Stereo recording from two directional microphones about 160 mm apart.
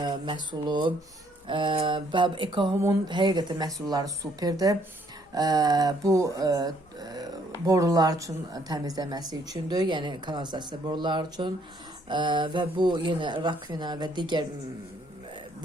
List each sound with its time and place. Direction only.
0.0 s speech: 30° right (ahead or behind)
1.5 s mantra: 30° right (ahead or behind)
3.1 s speech: 30° right (ahead or behind)